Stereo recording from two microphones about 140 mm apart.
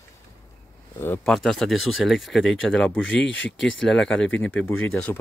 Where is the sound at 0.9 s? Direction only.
15° left (ahead or behind).